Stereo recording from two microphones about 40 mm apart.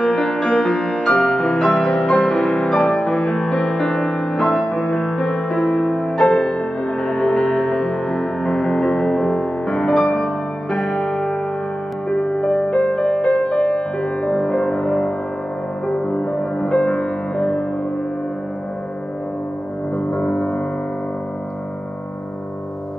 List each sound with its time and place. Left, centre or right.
0.0 s music: centre
20.1 s music: left